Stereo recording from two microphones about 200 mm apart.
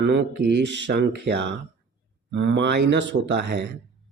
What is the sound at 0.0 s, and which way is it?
Speech, 60° right (ahead or behind).